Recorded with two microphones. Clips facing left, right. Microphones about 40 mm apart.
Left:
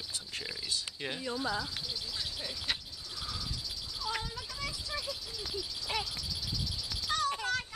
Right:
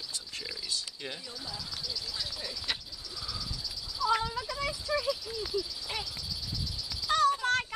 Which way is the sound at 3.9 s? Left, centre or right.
Right.